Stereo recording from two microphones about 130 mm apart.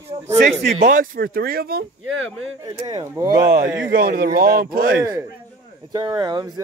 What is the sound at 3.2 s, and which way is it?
Speech, 25° right (ahead or behind).